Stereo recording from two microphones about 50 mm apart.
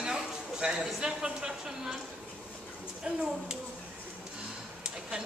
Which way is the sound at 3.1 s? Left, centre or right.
Centre.